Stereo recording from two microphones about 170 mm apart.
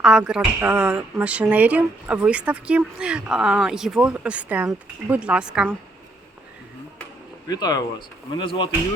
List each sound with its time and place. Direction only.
0.0 s speech: 5° right (ahead or behind)
7.4 s speech: 25° left (ahead or behind)